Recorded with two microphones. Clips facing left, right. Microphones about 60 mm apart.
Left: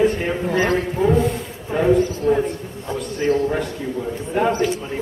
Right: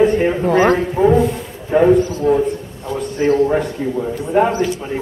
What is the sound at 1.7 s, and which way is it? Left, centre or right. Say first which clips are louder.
Speech: right 5 dB; right.